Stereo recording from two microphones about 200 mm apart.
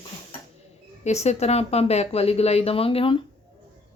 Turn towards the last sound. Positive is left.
turn(degrees=25)  # may be behind; listen again after turning